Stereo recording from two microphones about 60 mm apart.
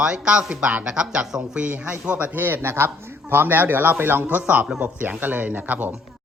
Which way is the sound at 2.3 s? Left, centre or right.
Right.